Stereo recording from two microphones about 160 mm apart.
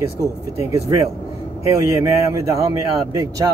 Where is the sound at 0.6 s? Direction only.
20° right (ahead or behind).